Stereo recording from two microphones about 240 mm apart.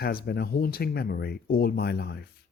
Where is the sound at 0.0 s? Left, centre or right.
Left.